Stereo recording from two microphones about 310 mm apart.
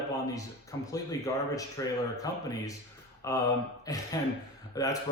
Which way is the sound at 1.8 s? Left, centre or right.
Centre.